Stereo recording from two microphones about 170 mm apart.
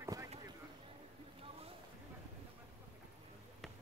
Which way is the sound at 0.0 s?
15° right (ahead or behind).